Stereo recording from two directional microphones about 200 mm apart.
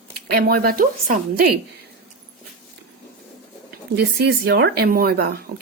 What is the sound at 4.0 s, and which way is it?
Speech, 55° right (ahead or behind).